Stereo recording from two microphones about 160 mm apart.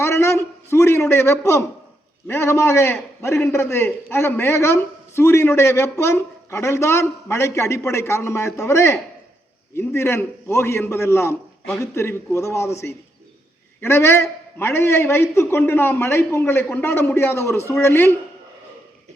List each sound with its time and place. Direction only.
0.0 s a man's voice: 15° left (ahead or behind)